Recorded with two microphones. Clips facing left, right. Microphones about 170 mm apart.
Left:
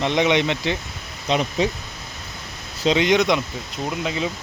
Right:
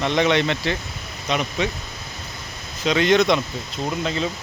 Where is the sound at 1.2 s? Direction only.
30° left (ahead or behind).